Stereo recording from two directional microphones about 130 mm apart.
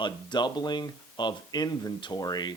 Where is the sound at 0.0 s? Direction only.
35° left (ahead or behind).